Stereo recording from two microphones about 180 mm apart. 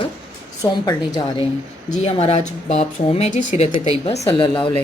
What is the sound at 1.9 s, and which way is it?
A woman's voice, 35° left (ahead or behind).